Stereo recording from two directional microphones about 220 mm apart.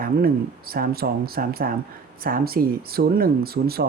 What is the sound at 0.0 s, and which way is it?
Speech, 40° right (ahead or behind).